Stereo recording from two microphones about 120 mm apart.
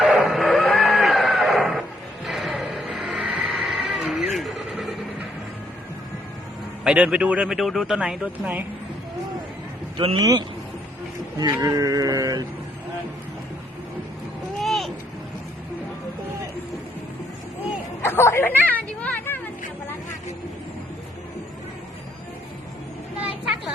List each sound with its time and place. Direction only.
0.0 s a sound: centre (ahead or behind)
2.2 s music: centre (ahead or behind)
3.5 s a sound: 5° right (ahead or behind)
4.4 s vehicle: centre (ahead or behind)
6.8 s speech: 10° right (ahead or behind)
10.2 s speech: 30° right (ahead or behind)
11.6 s a sound: 30° right (ahead or behind)
14.6 s vehicle: centre (ahead or behind)
18.0 s chatter: 20° left (ahead or behind)